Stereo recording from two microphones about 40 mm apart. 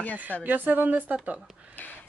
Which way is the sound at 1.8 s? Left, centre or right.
Left.